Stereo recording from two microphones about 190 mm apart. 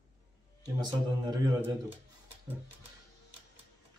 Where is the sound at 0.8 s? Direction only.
20° right (ahead or behind).